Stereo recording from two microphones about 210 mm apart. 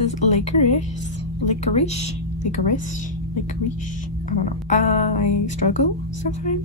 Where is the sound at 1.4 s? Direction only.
30° left (ahead or behind).